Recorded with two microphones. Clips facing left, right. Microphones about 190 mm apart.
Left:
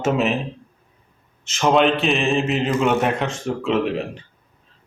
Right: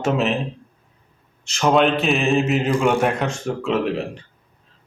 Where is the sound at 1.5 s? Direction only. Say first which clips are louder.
Even; centre (ahead or behind).